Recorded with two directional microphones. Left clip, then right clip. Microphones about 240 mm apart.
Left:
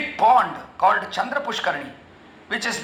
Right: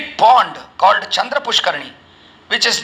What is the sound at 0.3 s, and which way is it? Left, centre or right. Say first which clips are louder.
A man's voice: right 5 dB; right.